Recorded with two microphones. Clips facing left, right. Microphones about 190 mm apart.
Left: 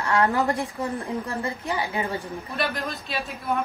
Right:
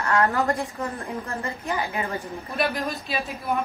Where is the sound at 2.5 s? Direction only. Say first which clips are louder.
Right 3 dB; centre (ahead or behind).